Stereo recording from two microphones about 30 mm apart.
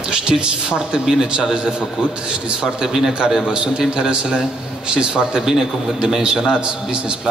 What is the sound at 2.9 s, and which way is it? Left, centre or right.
Speech, centre.